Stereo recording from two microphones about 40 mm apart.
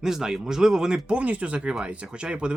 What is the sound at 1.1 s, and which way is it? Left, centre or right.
Speech, right.